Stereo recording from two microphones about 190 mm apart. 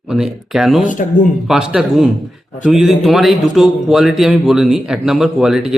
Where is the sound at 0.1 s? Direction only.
5° right (ahead or behind).